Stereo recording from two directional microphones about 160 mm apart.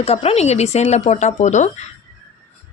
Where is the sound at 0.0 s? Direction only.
40° left (ahead or behind).